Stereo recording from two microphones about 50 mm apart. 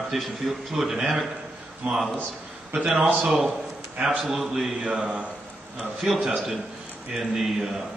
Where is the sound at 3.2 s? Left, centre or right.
Centre.